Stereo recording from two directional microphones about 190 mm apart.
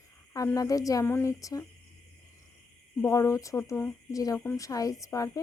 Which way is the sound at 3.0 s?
15° left (ahead or behind).